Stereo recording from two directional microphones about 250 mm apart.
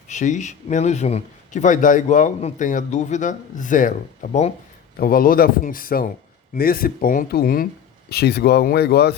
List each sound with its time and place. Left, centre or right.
0.1 s speech: left